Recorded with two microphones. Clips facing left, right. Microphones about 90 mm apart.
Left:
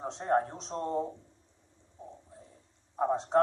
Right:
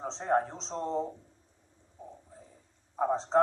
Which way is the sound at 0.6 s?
25° right (ahead or behind).